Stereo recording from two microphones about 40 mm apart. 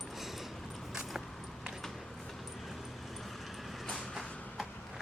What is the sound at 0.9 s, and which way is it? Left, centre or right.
Keys jangling, centre.